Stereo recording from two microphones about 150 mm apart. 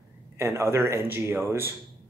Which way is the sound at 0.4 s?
15° right (ahead or behind).